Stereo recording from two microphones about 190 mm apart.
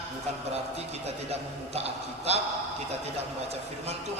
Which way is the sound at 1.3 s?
35° right (ahead or behind).